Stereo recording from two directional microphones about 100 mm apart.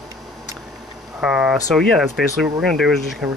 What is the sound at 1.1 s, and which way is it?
Speech, 10° right (ahead or behind).